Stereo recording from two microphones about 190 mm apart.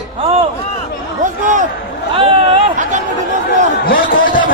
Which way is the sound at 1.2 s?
40° right (ahead or behind).